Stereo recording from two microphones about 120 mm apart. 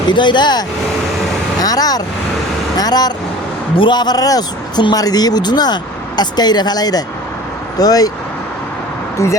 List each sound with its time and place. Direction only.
0.1 s a man's voice: 40° left (ahead or behind)
9.1 s speech: 25° left (ahead or behind)